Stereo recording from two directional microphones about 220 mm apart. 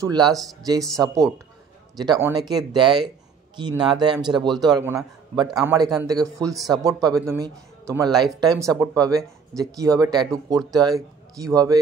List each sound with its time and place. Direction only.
0.0 s speech: 15° right (ahead or behind)
6.4 s speech: centre (ahead or behind)
6.8 s speech: 15° right (ahead or behind)